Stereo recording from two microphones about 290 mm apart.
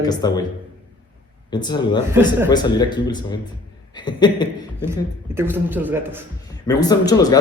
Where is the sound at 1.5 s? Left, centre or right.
Centre.